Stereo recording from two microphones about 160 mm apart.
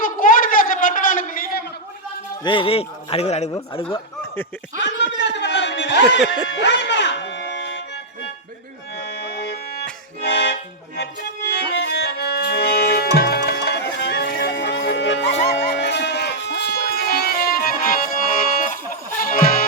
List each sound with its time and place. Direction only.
0.0 s a sound: 60° left (ahead or behind)
2.4 s speech: 30° left (ahead or behind)
4.8 s a sound: 90° left
9.0 s music: 90° left
15.4 s livestock: 90° left; by 18.8 s 60° left (ahead or behind)
19.2 s music: 65° left (ahead or behind)